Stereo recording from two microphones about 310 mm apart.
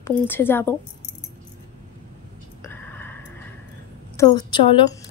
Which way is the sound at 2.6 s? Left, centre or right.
Centre.